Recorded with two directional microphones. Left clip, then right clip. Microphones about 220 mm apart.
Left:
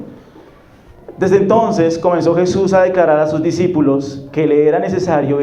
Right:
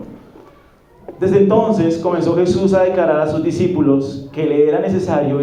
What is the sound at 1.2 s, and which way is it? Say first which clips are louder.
A man's voice: left 1 dB; 50° left (ahead or behind).